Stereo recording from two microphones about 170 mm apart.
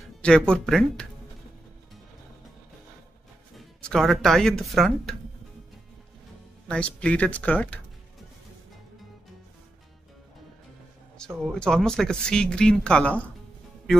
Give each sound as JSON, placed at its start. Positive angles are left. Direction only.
{"t": 0.2, "sound": "speech", "side_deg": 5}
{"t": 3.5, "sound": "speech", "side_deg": 0}
{"t": 6.7, "sound": "speech", "side_deg": 5}
{"t": 11.1, "sound": "speech", "side_deg": 0}